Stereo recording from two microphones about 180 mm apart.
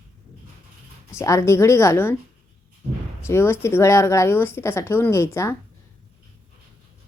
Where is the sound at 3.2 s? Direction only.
15° left (ahead or behind).